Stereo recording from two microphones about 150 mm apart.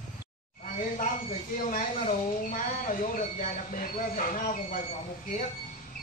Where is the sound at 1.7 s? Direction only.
65° left (ahead or behind).